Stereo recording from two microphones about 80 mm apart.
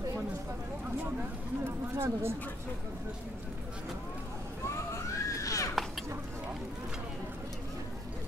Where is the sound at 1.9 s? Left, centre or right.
Right.